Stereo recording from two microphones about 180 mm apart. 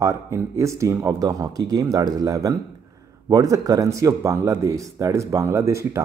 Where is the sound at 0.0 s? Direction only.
15° right (ahead or behind).